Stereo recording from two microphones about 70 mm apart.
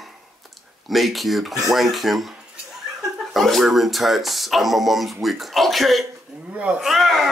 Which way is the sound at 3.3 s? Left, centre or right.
Centre.